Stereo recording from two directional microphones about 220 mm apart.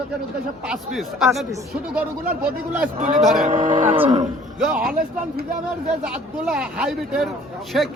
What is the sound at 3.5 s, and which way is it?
Speech, 35° right (ahead or behind).